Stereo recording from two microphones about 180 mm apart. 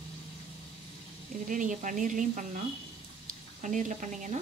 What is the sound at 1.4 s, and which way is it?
A woman's voice, 45° right (ahead or behind).